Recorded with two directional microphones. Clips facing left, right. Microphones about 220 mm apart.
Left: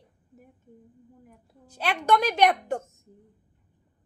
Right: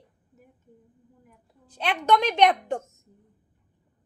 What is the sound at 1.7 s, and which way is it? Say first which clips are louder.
A woman's voice: right 1 dB; 10° left (ahead or behind).